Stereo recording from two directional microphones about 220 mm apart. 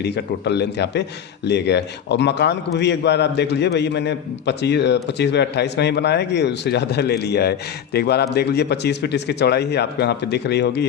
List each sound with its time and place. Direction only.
0.0 s a man's voice: 50° left (ahead or behind)